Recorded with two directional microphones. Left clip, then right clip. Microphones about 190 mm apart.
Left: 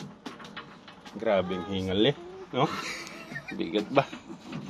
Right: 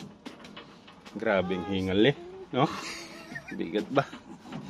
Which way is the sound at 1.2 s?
30° right (ahead or behind).